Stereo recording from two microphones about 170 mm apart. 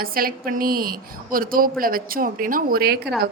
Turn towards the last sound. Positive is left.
turn(degrees=-65)  # may be behind; listen again after turning